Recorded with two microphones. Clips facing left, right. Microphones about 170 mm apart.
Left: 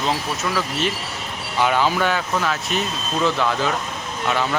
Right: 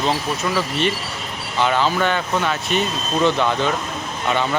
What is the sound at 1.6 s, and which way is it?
Speech, 10° left (ahead or behind).